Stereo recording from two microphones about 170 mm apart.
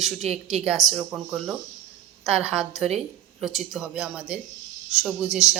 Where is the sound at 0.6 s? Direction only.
Centre (ahead or behind).